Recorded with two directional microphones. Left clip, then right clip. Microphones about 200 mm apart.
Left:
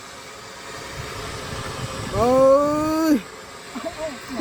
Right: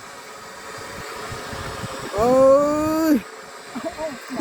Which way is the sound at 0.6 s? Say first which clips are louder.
Even; 50° left (ahead or behind).